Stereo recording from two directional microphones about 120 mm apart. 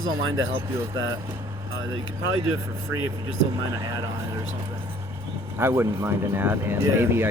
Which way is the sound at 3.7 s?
30° right (ahead or behind).